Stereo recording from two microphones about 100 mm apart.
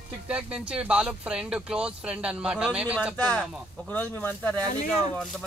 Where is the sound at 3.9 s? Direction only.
20° left (ahead or behind).